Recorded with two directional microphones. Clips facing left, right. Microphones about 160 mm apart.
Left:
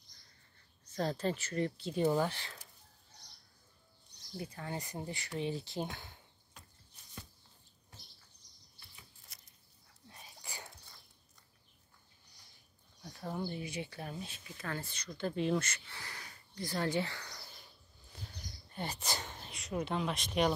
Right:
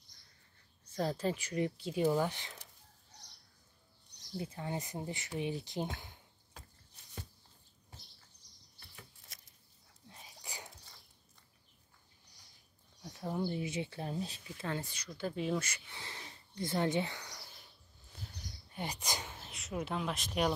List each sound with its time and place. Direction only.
0.8 s speech: 10° right (ahead or behind)
4.4 s speech: 20° right (ahead or behind)
10.4 s whispering: 20° right (ahead or behind)
13.1 s speech: 10° right (ahead or behind)
13.6 s speech: 25° right (ahead or behind)
18.8 s speech: 15° right (ahead or behind)